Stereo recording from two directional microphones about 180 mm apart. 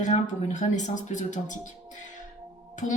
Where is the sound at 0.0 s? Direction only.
45° left (ahead or behind).